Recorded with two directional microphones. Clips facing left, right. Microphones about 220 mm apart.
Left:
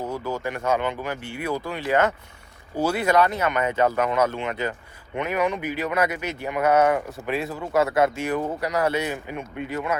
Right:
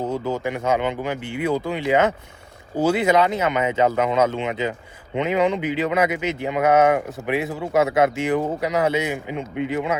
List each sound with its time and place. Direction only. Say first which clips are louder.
0.0 s speech: right 4 dB; 25° right (ahead or behind)